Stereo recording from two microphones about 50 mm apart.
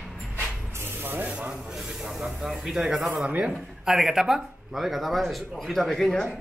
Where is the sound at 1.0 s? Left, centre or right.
Right.